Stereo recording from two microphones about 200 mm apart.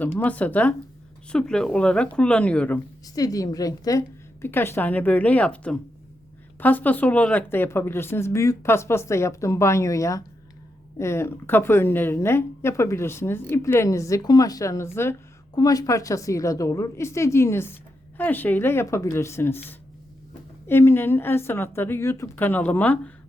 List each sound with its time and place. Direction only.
0.0 s a woman's voice: 10° left (ahead or behind)